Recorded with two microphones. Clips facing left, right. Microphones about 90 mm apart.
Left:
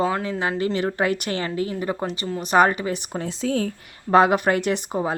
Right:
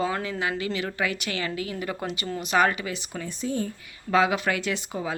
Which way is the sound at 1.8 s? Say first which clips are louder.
Left 5 dB; 30° left (ahead or behind).